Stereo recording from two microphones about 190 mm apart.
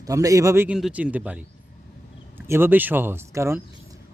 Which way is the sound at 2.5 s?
10° right (ahead or behind).